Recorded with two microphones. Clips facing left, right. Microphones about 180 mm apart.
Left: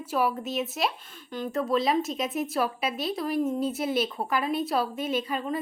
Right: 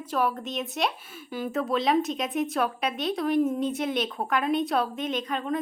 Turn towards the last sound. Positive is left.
turn(degrees=5)  # may be behind; listen again after turning